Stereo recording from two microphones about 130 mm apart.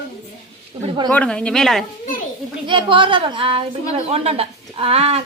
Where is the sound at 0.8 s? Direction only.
35° right (ahead or behind).